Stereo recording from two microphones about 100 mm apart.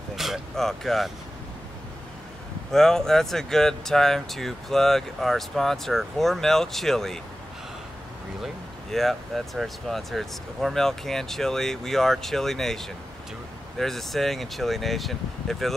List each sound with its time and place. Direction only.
0.1 s a sound: centre (ahead or behind)
2.7 s speech: 5° left (ahead or behind)
8.9 s speech: centre (ahead or behind)